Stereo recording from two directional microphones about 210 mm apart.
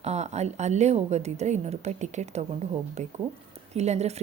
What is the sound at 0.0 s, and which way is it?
Speech, 30° right (ahead or behind).